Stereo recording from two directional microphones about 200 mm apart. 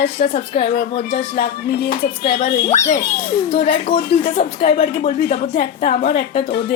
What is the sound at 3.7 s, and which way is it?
Music, 45° left (ahead or behind).